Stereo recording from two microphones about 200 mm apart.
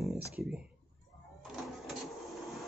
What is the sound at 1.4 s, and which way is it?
Printer, centre (ahead or behind).